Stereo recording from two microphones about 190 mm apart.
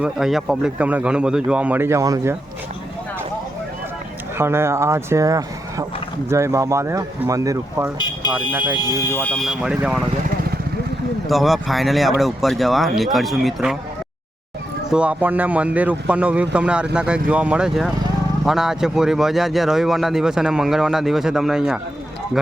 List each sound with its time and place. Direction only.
0.0 s a man's voice: centre (ahead or behind); by 2.3 s 15° right (ahead or behind)
4.4 s a man's voice: 15° right (ahead or behind)
8.8 s speech: 15° left (ahead or behind); by 10.0 s 5° right (ahead or behind)
11.3 s speech: centre (ahead or behind)
14.8 s a man's voice: 5° right (ahead or behind)